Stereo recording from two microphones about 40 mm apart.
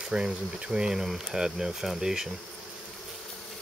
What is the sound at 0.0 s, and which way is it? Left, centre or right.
Speech, centre.